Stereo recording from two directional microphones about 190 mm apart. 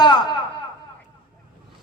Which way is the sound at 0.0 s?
20° left (ahead or behind).